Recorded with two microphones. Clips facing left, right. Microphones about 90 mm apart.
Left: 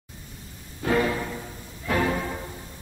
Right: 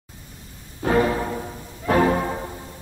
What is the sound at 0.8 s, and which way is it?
Music, 35° right (ahead or behind).